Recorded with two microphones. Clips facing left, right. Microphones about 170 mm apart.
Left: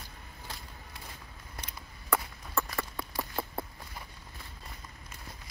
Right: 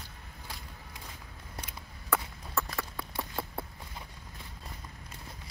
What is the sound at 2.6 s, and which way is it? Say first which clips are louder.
Clip-clop: left 1 dB; centre (ahead or behind).